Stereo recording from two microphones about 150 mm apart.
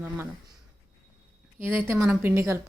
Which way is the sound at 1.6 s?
15° right (ahead or behind).